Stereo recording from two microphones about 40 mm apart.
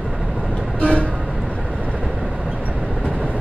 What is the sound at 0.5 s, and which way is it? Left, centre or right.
Vehicle, left.